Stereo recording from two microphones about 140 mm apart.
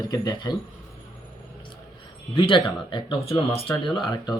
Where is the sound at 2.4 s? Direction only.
35° left (ahead or behind).